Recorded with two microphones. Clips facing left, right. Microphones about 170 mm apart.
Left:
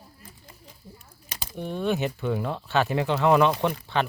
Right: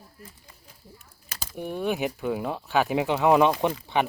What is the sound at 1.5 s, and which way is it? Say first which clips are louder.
Speech: left 1 dB; 10° right (ahead or behind).